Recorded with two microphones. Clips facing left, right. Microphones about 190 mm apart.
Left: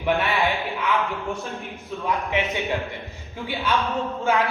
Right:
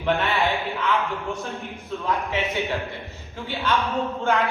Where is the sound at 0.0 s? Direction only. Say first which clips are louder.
Even; 15° left (ahead or behind).